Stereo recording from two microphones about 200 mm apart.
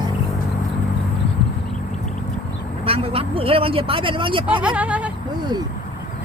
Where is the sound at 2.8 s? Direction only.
30° right (ahead or behind).